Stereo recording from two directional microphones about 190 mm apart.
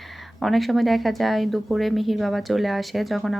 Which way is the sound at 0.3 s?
Centre (ahead or behind).